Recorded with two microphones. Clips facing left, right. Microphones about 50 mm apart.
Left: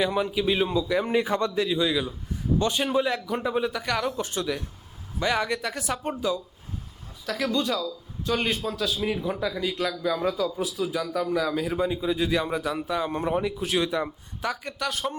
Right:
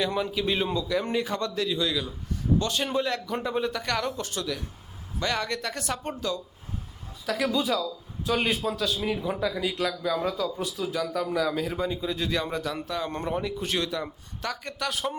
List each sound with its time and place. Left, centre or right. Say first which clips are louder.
0.0 s a man's voice: left 3 dB; centre
1.1 s speech: left 4 dB; centre
2.8 s a man's voice: left 3 dB; centre
4.2 s speech: left 3 dB; left
7.3 s a man's voice: even; centre
13.8 s speech: left 4 dB; centre
14.5 s a man's voice: left 1 dB; centre